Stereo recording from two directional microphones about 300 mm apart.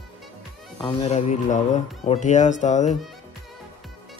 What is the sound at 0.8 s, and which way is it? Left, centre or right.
Speech, left.